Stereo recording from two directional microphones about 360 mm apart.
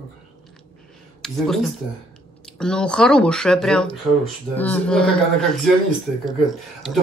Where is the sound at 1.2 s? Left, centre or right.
Centre.